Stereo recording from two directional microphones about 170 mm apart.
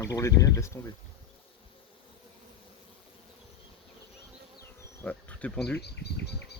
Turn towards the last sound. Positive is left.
turn(degrees=80)